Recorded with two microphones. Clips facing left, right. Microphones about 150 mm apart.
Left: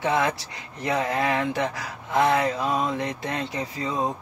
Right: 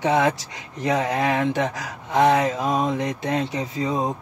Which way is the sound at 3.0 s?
20° right (ahead or behind).